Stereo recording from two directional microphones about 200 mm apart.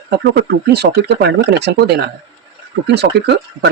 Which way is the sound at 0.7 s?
55° right (ahead or behind).